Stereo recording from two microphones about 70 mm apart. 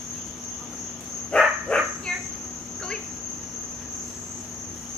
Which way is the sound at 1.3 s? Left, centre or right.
Centre.